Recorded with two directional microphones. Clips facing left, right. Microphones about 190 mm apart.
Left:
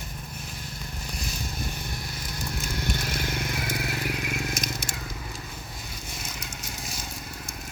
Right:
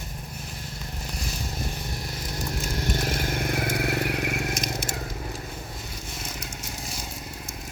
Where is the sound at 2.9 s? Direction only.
45° right (ahead or behind); by 4.4 s 60° right (ahead or behind).